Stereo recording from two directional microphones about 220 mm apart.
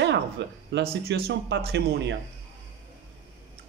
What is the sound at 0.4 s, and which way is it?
Speech, 50° right (ahead or behind).